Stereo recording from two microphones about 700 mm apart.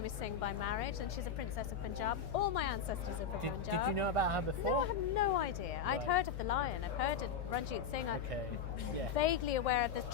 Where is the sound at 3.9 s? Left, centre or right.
Right.